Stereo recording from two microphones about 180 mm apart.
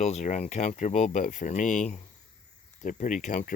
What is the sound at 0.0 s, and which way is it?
Speech, 40° left (ahead or behind).